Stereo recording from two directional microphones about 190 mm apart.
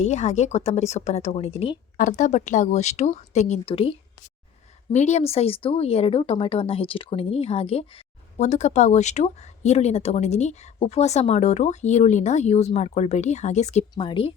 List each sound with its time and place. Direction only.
0.0 s speech: 40° left (ahead or behind)
2.0 s speech: 45° left (ahead or behind)
13.9 s speech: 25° left (ahead or behind)